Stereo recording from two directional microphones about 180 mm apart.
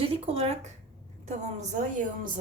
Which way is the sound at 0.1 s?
35° right (ahead or behind).